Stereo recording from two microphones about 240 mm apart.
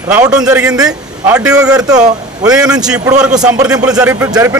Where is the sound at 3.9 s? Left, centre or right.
Centre.